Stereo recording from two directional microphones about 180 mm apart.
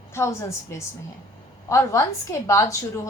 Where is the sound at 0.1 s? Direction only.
15° left (ahead or behind).